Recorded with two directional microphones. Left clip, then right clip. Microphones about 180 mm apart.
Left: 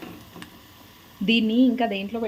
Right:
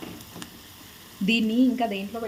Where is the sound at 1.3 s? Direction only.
5° left (ahead or behind).